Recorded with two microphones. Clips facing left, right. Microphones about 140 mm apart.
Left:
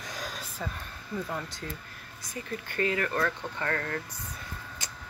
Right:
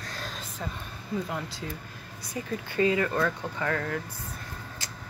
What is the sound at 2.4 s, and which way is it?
Speech, 20° right (ahead or behind).